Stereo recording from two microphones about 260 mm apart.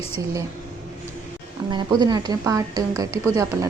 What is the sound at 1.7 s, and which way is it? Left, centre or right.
Speech, centre.